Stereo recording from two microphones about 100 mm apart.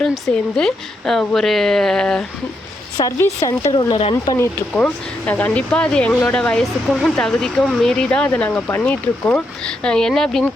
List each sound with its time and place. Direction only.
0.0 s a woman's voice: 5° left (ahead or behind)
3.2 s speech: 30° left (ahead or behind)
3.7 s speech: 45° left (ahead or behind)
4.4 s speech: 15° left (ahead or behind)